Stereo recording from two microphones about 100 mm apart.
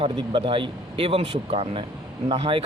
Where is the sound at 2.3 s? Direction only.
60° right (ahead or behind).